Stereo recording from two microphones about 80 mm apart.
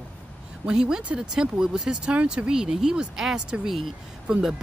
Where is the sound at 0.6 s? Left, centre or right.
Centre.